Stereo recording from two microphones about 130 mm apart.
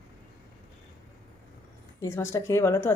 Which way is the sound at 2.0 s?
25° left (ahead or behind).